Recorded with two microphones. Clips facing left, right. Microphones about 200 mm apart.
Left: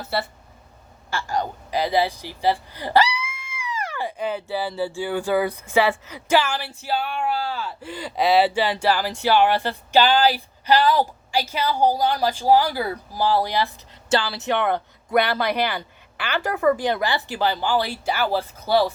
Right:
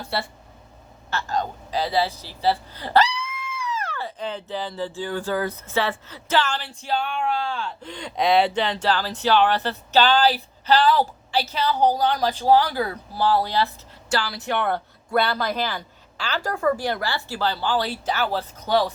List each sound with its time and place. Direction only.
0.0 s speech: centre (ahead or behind)
15.4 s speech: 65° left (ahead or behind)
16.4 s speech: 20° left (ahead or behind)